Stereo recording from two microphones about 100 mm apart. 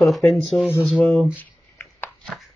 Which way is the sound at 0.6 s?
20° left (ahead or behind).